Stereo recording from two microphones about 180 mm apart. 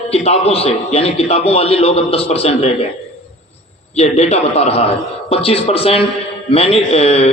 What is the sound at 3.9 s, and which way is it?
A man's voice, 35° left (ahead or behind).